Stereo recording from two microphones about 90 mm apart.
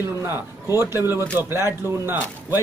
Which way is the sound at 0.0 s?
30° right (ahead or behind).